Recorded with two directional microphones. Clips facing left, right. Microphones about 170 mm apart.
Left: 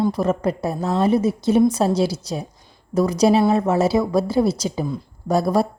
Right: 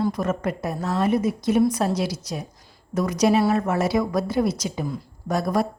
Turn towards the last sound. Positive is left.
turn(degrees=30)  # may be behind; listen again after turning